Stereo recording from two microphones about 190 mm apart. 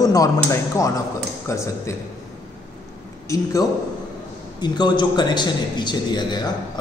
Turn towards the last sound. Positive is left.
turn(degrees=20)  # may be behind; listen again after turning